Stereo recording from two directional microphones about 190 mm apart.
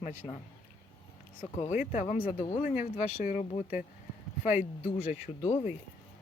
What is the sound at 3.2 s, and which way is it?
Speech, 45° left (ahead or behind).